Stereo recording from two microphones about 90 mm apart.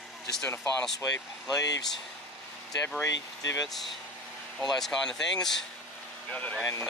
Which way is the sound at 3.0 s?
40° left (ahead or behind).